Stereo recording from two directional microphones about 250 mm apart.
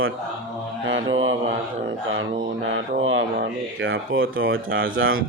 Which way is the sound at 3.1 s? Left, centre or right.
Right.